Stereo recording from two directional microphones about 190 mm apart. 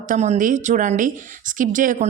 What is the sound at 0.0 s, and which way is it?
A woman's voice, 40° right (ahead or behind).